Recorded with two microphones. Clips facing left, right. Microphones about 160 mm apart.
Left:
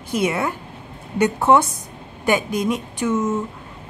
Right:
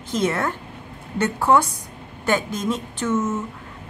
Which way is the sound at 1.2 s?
20° left (ahead or behind).